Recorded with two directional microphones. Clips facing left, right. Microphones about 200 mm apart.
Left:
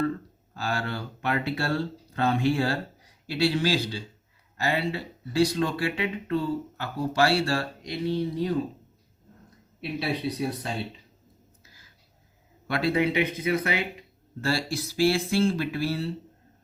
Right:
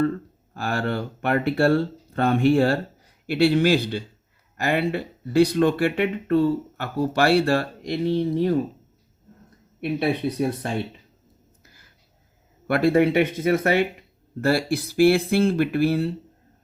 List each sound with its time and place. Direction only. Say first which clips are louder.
0.5 s speech: right 5 dB; 55° right (ahead or behind)
8.0 s speech: right 4 dB; 25° right (ahead or behind)
9.8 s speech: right 6 dB; 55° right (ahead or behind)
12.6 s speech: right 7 dB; 50° right (ahead or behind)